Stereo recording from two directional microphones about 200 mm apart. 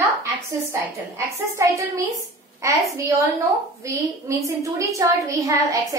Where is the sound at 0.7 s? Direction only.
15° right (ahead or behind).